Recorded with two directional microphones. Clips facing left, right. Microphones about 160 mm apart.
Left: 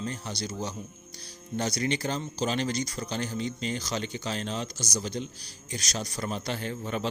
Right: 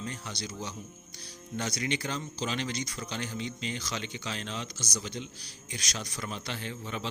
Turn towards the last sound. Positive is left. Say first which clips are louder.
# left 5 dB
turn(degrees=45)  # may be behind; listen again after turning